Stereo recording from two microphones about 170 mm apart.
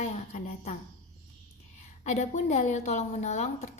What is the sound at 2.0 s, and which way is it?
Speech, 45° left (ahead or behind).